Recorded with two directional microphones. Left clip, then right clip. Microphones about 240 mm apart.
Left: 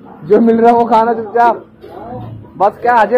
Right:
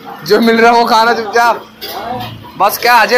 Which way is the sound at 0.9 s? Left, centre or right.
Centre.